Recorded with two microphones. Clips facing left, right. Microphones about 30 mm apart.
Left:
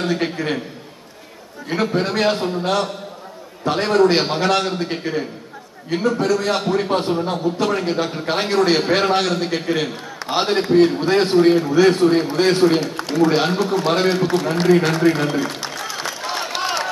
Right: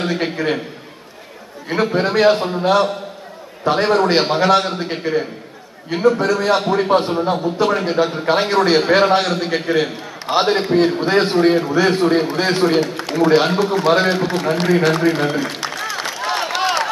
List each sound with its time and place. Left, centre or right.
0.0 s a man's voice: centre
1.9 s a man's voice: centre
13.0 s a sound: right
13.3 s a man's voice: centre
15.6 s music: right
16.3 s a sound: right